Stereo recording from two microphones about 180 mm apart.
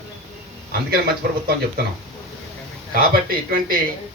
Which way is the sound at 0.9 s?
60° right (ahead or behind).